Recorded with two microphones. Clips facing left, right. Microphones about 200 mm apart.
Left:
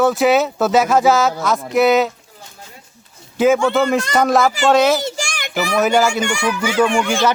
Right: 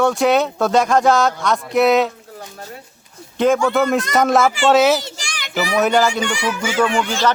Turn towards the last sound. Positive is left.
turn(degrees=10)  # may be behind; listen again after turning